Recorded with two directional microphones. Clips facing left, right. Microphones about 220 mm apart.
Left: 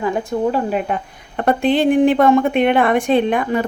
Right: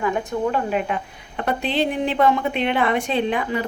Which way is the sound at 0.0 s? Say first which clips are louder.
Left 4 dB; 35° left (ahead or behind).